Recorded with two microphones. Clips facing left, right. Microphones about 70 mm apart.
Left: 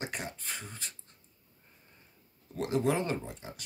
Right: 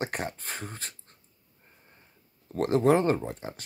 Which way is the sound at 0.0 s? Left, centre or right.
Right.